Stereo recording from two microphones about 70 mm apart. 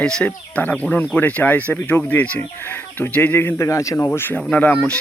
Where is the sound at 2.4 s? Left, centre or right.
Left.